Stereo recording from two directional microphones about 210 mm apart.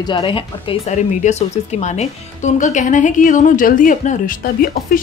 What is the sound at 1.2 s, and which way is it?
Speech, 35° left (ahead or behind).